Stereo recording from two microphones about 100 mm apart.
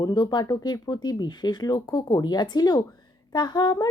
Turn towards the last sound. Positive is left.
turn(degrees=45)  # may be behind; listen again after turning